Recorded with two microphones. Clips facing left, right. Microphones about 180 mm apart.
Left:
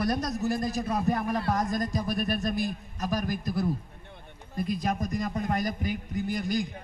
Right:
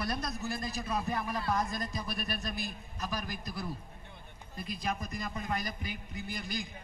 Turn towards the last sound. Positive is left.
turn(degrees=45)  # may be behind; listen again after turning